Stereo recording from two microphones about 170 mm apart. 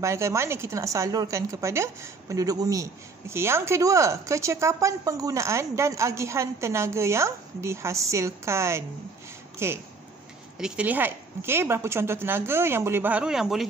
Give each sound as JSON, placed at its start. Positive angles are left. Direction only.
{"t": 0.0, "sound": "speech", "side_deg": -15}